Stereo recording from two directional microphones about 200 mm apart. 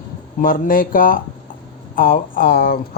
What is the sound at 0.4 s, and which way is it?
Speech, 45° left (ahead or behind).